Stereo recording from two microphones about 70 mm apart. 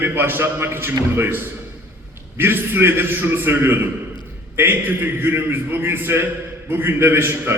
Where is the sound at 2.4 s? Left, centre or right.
Right.